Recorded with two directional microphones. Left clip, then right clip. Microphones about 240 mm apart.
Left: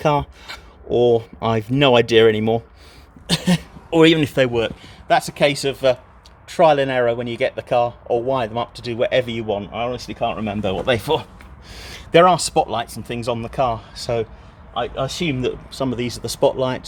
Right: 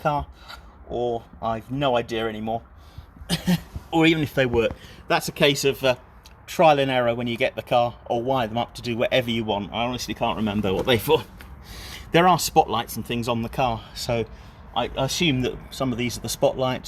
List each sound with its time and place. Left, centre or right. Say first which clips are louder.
0.0 s speech: left 6 dB; left; by 11.3 s centre
11.7 s a sound: left 3 dB; left
12.1 s speech: left 4 dB; centre